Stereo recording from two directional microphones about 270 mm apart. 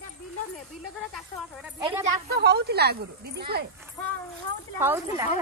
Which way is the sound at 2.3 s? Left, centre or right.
Right.